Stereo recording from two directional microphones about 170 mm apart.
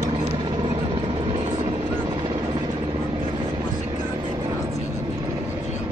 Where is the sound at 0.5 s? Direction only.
30° right (ahead or behind).